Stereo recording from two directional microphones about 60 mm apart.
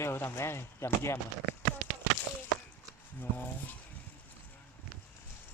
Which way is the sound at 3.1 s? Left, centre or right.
Left.